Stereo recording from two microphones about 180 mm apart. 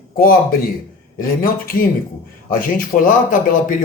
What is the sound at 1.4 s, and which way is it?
Speech, 50° left (ahead or behind).